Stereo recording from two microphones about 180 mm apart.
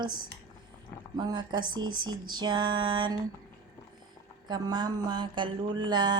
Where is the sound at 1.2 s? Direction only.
25° right (ahead or behind).